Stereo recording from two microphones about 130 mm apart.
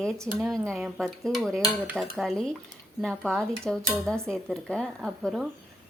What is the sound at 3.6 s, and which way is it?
Speech, 5° left (ahead or behind).